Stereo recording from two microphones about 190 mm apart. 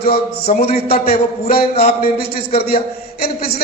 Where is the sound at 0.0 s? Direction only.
55° left (ahead or behind).